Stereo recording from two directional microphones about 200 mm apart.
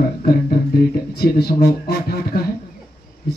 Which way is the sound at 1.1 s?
50° left (ahead or behind).